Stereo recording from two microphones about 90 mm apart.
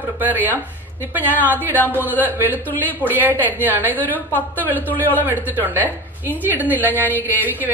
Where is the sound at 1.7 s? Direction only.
20° left (ahead or behind).